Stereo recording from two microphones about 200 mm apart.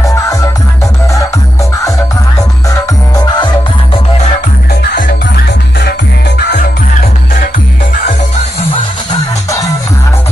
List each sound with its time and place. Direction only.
0.0 s music: 15° left (ahead or behind)
2.7 s music: 20° left (ahead or behind)
4.8 s music: 45° left (ahead or behind)